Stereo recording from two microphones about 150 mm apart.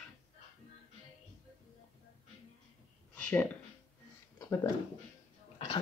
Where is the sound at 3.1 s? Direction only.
10° left (ahead or behind).